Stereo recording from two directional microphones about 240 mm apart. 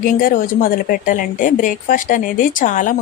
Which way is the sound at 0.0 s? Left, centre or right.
Left.